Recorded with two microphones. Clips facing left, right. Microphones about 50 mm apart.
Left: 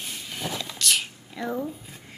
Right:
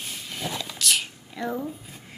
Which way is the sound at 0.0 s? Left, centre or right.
Centre.